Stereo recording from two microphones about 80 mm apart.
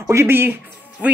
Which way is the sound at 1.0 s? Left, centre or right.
Centre.